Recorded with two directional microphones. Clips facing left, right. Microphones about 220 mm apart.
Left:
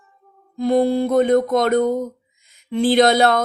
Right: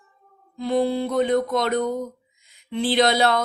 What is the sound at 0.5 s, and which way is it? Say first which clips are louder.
Speech: left 5 dB; 45° left (ahead or behind).